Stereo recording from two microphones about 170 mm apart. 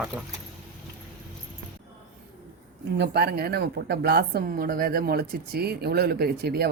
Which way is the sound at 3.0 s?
70° right (ahead or behind).